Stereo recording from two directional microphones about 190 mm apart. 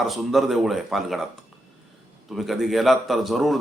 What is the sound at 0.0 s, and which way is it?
A man's voice, centre (ahead or behind).